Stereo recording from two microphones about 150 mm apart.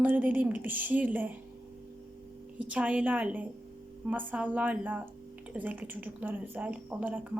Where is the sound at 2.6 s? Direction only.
10° right (ahead or behind).